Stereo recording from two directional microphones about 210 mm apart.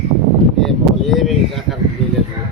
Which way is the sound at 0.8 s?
Centre (ahead or behind).